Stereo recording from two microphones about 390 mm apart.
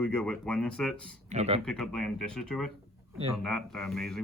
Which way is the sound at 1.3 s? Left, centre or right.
Centre.